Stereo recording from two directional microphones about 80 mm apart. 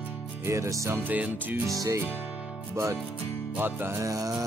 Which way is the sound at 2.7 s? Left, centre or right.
Right.